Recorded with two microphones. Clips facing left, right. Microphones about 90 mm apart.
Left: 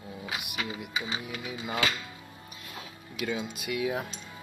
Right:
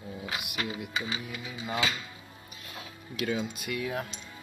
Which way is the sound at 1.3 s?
65° left (ahead or behind).